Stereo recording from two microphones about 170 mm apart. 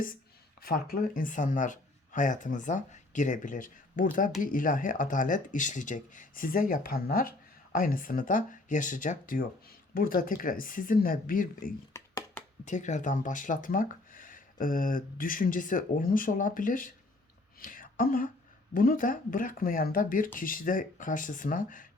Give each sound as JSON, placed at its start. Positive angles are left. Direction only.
{"t": 0.6, "sound": "speech", "side_deg": 60}
{"t": 11.9, "sound": "a sound", "side_deg": 15}
{"t": 12.6, "sound": "speech", "side_deg": 45}